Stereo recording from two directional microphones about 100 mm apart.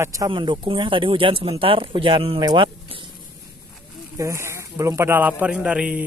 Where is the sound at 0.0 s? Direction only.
30° right (ahead or behind).